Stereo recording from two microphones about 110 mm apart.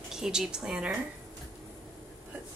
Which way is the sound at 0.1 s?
5° right (ahead or behind).